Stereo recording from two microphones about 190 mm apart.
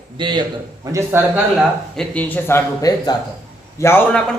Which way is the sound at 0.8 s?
15° right (ahead or behind).